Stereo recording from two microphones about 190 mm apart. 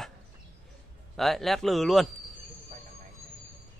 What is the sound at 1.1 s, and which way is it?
Speech, centre (ahead or behind).